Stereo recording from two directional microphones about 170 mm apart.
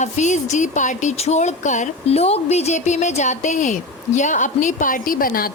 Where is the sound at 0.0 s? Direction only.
45° left (ahead or behind).